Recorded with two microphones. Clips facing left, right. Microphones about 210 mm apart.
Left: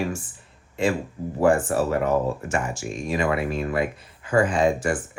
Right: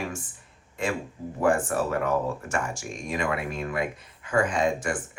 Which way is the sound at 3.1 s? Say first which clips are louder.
Left 5 dB; 30° left (ahead or behind).